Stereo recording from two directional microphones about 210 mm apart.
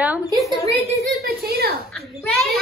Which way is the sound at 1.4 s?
50° right (ahead or behind).